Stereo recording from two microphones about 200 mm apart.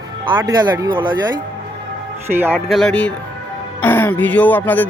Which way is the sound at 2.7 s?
5° left (ahead or behind).